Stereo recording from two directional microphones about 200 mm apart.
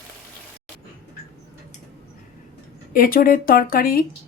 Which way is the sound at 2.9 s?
45° left (ahead or behind).